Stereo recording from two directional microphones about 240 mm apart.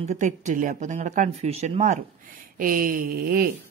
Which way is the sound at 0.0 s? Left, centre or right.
Right.